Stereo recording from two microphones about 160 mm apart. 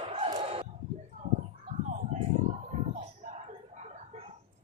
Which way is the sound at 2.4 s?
45° right (ahead or behind).